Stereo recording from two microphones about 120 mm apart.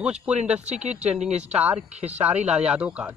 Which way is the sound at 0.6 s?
70° right (ahead or behind).